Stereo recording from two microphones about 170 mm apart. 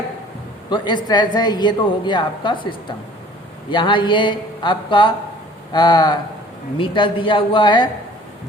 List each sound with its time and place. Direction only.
0.7 s a woman's voice: 30° left (ahead or behind)